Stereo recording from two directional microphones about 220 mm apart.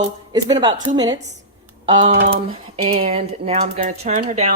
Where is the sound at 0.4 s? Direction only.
20° right (ahead or behind).